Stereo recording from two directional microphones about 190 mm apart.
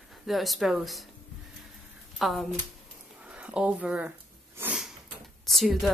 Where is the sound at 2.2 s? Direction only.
Centre (ahead or behind).